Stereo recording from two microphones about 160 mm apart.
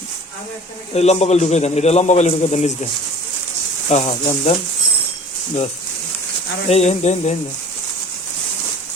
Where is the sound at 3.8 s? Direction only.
40° left (ahead or behind).